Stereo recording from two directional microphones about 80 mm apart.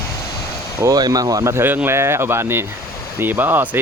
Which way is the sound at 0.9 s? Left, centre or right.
Right.